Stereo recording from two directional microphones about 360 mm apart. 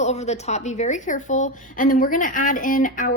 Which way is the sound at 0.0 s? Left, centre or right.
Centre.